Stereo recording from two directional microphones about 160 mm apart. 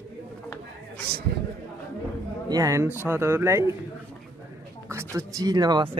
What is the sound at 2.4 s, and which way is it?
Speech, 20° right (ahead or behind).